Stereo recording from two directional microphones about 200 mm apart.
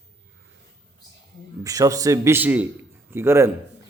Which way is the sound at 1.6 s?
15° right (ahead or behind).